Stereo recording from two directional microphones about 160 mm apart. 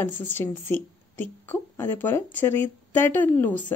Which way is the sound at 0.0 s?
10° left (ahead or behind).